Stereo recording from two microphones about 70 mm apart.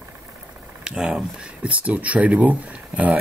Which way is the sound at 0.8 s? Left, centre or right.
Centre.